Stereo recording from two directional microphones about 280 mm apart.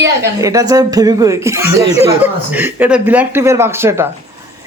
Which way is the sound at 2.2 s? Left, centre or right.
Centre.